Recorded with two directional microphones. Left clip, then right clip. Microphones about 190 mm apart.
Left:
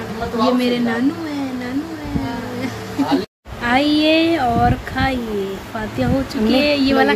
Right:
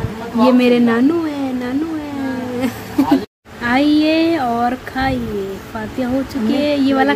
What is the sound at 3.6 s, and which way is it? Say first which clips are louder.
A woman's voice: right 1 dB; 15° right (ahead or behind).